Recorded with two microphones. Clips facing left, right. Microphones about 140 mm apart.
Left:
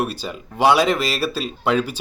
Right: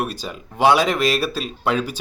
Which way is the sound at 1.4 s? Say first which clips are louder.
Left 2 dB; centre (ahead or behind).